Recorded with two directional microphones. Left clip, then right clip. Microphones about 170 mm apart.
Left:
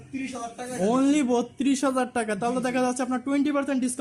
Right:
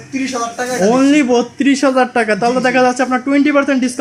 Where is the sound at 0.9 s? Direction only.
25° left (ahead or behind).